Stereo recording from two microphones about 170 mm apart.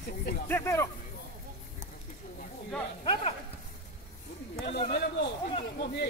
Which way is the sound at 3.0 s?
30° left (ahead or behind).